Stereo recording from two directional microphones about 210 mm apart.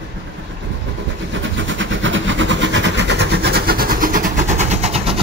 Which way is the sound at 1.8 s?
60° right (ahead or behind).